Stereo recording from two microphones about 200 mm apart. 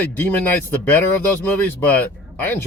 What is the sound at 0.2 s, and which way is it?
Speech, 10° left (ahead or behind).